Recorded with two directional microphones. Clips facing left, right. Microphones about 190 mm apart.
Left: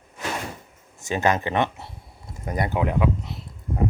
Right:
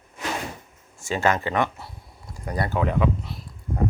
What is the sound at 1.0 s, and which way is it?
Speech, 20° left (ahead or behind).